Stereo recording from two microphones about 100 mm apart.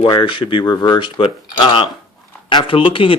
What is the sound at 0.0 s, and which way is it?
Speech, 55° left (ahead or behind).